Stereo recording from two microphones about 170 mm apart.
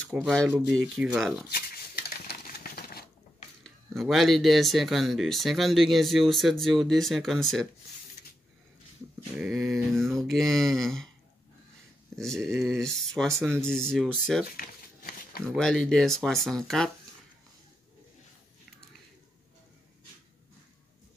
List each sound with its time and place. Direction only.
0.1 s speech: centre (ahead or behind)
1.5 s a sound: 65° left (ahead or behind)
3.6 s speech: centre (ahead or behind)
9.4 s speech: centre (ahead or behind)
12.2 s speech: 5° left (ahead or behind)
14.6 s a sound: 60° left (ahead or behind)
15.4 s speech: 5° left (ahead or behind)